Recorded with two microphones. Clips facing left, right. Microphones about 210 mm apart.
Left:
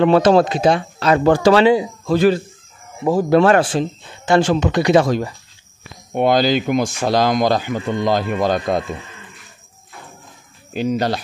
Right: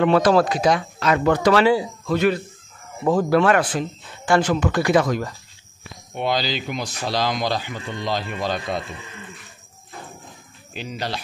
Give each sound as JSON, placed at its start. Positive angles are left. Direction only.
{"t": 0.0, "sound": "speech", "side_deg": 30}
{"t": 2.1, "sound": "speech", "side_deg": 35}
{"t": 3.0, "sound": "speech", "side_deg": 10}
{"t": 3.3, "sound": "speech", "side_deg": 30}
{"t": 6.1, "sound": "speech", "side_deg": 50}
{"t": 10.7, "sound": "speech", "side_deg": 45}